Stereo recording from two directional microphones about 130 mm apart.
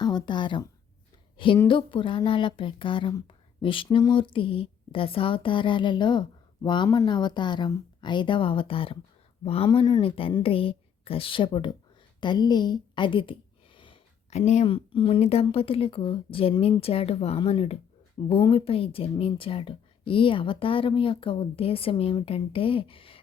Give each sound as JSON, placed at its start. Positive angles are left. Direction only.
{"t": 0.0, "sound": "a sound", "side_deg": 35}
{"t": 1.6, "sound": "a woman's voice", "side_deg": 40}
{"t": 9.7, "sound": "a woman's voice", "side_deg": 30}
{"t": 10.0, "sound": "a woman's voice", "side_deg": 45}
{"t": 13.7, "sound": "a sound", "side_deg": 40}
{"t": 14.3, "sound": "speech", "side_deg": 60}